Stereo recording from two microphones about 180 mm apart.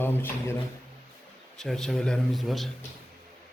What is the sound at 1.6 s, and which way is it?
A man's voice, 5° left (ahead or behind).